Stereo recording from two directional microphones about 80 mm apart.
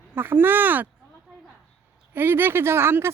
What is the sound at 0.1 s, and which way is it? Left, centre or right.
Speech, right.